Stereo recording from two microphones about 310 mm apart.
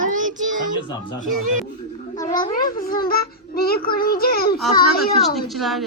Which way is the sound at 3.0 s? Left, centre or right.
Left.